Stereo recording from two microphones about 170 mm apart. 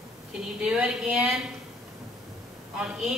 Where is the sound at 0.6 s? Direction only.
5° right (ahead or behind).